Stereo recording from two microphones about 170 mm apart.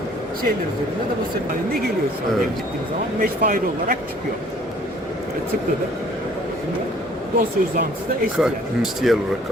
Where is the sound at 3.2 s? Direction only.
55° right (ahead or behind).